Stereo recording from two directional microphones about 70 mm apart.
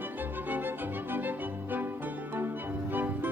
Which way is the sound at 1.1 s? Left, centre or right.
Right.